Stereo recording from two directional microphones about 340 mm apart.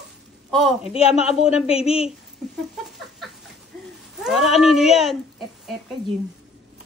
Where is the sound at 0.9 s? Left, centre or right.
Centre.